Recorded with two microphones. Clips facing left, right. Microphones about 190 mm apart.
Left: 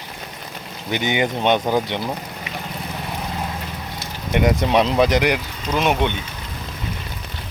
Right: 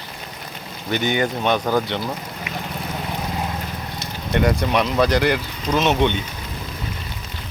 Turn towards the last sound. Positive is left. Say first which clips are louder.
# right 1 dB
turn(degrees=10)  # may be behind; listen again after turning